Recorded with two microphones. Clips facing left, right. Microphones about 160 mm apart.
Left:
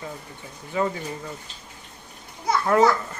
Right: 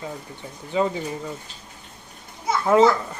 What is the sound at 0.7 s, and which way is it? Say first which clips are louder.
Speech: right 3 dB; 15° right (ahead or behind).